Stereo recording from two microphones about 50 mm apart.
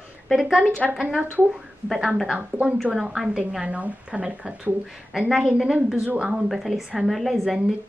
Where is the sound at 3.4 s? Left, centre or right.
Right.